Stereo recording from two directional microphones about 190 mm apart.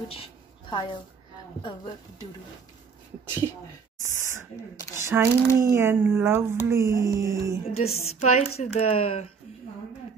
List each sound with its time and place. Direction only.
0.1 s a sound: 30° left (ahead or behind)
5.0 s speech: 15° right (ahead or behind)
7.6 s speech: 35° left (ahead or behind)